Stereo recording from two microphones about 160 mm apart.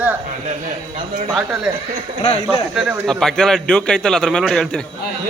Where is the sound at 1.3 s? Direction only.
5° right (ahead or behind).